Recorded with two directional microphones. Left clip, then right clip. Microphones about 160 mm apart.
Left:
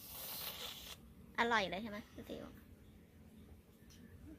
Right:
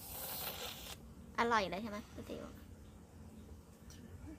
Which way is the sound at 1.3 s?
10° left (ahead or behind).